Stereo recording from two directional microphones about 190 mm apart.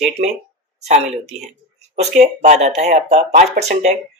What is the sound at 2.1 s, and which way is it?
Speech, 35° right (ahead or behind).